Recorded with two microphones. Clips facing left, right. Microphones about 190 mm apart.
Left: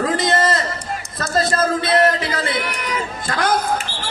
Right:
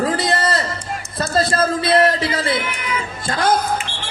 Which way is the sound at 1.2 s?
30° right (ahead or behind).